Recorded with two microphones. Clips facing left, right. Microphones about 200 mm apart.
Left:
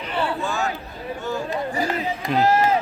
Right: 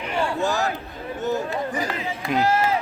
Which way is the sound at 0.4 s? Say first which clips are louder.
Right 2 dB; 40° right (ahead or behind).